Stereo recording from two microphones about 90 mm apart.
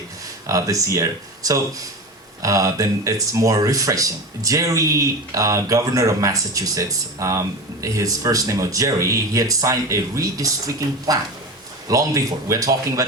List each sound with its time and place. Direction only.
0.4 s speech: 40° right (ahead or behind)